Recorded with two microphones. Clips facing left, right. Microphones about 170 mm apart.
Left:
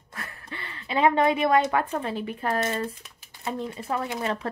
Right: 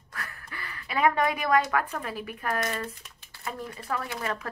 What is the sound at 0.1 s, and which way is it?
A woman's voice, 25° left (ahead or behind).